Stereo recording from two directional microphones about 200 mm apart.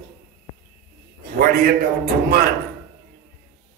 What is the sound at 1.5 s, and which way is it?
Speech, 45° right (ahead or behind).